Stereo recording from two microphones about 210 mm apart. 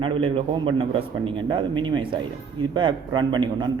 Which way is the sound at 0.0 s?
25° right (ahead or behind).